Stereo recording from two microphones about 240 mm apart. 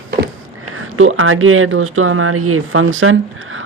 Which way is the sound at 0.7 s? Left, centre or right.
Right.